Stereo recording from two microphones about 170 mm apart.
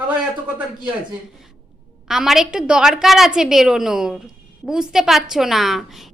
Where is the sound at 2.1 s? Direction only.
Centre (ahead or behind).